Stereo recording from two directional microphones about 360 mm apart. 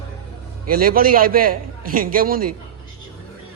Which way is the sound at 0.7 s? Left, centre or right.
Right.